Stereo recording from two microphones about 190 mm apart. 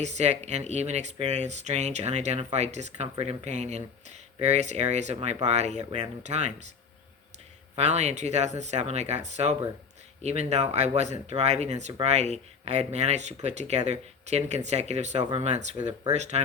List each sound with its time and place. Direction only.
0.0 s speech: 35° right (ahead or behind)
7.8 s speech: 35° right (ahead or behind)